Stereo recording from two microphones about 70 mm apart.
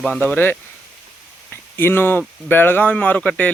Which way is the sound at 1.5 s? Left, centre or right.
Left.